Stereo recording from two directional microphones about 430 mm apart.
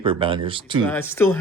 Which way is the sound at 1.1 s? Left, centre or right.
Centre.